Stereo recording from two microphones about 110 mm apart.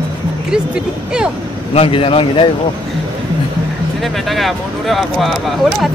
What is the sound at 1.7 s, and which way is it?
Speech, 60° left (ahead or behind).